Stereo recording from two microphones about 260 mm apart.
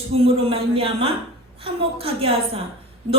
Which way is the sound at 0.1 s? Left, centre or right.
Right.